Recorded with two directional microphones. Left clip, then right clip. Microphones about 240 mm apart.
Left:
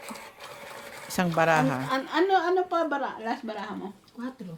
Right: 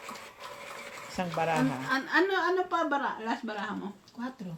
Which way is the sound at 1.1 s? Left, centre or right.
Left.